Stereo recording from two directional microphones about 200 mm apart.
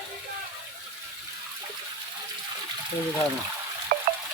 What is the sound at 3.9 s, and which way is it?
Water, 50° right (ahead or behind).